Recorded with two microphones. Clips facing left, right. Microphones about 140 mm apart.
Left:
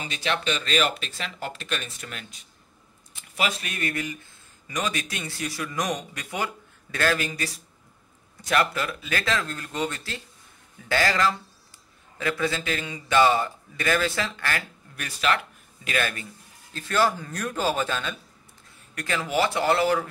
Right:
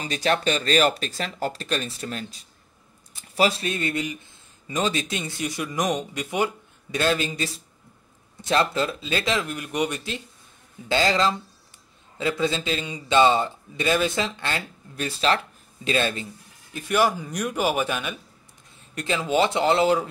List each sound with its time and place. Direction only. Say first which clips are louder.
0.0 s a man's voice: right 5 dB; 40° right (ahead or behind); by 16.3 s 25° right (ahead or behind)
16.7 s a man's voice: right 2 dB; 15° right (ahead or behind)